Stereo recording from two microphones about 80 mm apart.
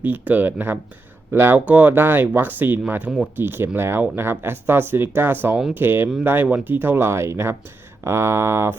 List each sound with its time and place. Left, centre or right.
0.0 s speech: right